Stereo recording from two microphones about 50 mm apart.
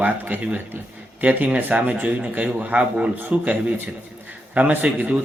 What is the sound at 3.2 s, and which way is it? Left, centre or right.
Speech, right.